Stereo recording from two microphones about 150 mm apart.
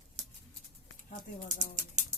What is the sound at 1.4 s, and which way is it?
Speech, 55° right (ahead or behind).